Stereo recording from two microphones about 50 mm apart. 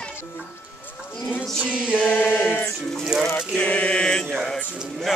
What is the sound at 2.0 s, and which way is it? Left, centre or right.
Chant, left.